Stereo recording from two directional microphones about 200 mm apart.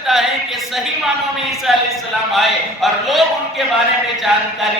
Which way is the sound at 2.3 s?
Centre (ahead or behind).